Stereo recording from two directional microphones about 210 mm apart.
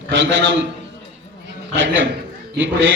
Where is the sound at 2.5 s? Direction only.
60° right (ahead or behind).